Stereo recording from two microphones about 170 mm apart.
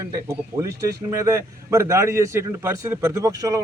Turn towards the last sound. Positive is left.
turn(degrees=-20)  # may be behind; listen again after turning